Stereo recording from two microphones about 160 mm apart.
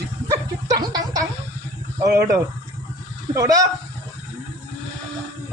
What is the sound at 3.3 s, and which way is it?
Speech, 20° right (ahead or behind).